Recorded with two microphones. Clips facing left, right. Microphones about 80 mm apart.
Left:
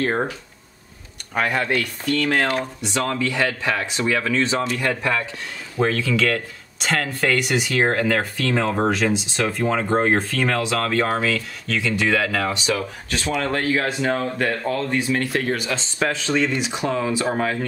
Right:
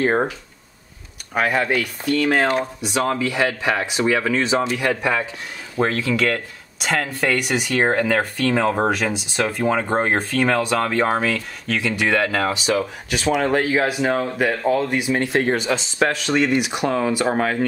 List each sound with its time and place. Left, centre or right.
0.0 s speech: centre
1.3 s speech: centre
2.8 s speech: centre
11.2 s speech: centre; by 15.8 s right
16.0 s speech: centre